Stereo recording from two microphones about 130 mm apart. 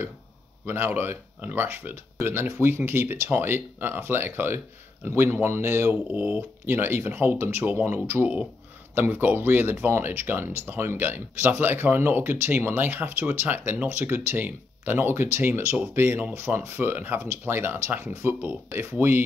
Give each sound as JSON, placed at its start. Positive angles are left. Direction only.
{"t": 0.7, "sound": "speech", "side_deg": -15}